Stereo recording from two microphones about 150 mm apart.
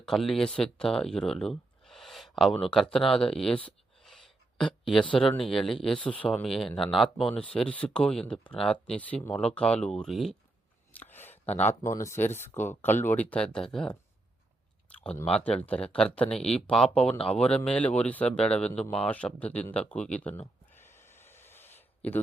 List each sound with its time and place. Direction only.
0.0 s speech: centre (ahead or behind)
3.1 s a sound: 5° left (ahead or behind)
5.4 s speech: centre (ahead or behind)
10.9 s a sound: 15° left (ahead or behind)
11.8 s speech: 20° left (ahead or behind)
15.3 s speech: 5° left (ahead or behind)
17.1 s speech: 40° left (ahead or behind)
17.3 s speech: 10° left (ahead or behind)
20.7 s a sound: 15° left (ahead or behind)